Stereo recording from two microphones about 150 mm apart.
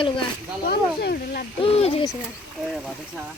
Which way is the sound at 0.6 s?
90° left.